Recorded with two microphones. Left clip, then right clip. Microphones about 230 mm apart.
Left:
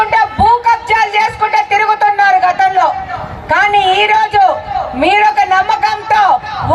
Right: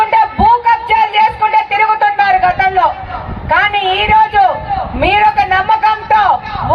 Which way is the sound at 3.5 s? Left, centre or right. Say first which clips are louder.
Left 2 dB; left.